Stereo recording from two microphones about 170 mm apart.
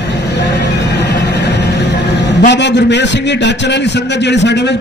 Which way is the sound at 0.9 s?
90° left.